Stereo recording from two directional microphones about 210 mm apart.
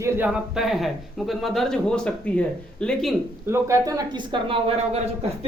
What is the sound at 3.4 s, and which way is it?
Speech, 15° right (ahead or behind).